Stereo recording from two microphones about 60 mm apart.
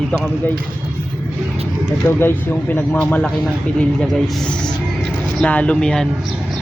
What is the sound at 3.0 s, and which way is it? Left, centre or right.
Speech, left.